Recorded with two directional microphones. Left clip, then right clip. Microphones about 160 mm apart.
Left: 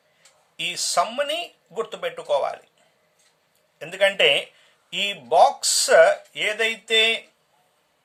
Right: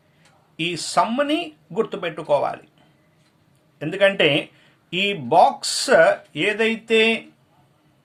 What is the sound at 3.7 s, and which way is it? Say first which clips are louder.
Speech: right 2 dB; 20° left (ahead or behind).